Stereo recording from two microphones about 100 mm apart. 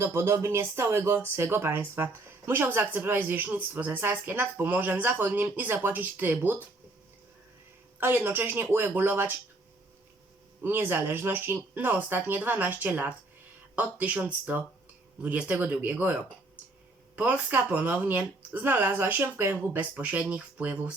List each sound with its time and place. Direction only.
0.0 s speech: 25° right (ahead or behind)
7.9 s speech: 20° right (ahead or behind)
10.6 s speech: 20° right (ahead or behind)
17.2 s speech: 15° right (ahead or behind)